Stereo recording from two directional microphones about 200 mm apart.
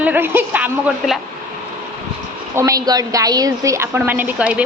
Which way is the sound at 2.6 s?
15° right (ahead or behind).